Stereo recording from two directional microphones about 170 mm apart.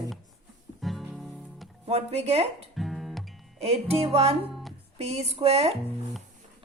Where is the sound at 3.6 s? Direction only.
35° right (ahead or behind).